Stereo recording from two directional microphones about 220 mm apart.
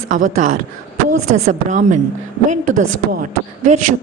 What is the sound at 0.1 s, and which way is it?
A man's voice, 35° right (ahead or behind).